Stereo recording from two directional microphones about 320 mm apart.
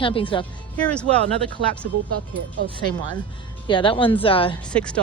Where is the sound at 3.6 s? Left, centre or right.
Centre.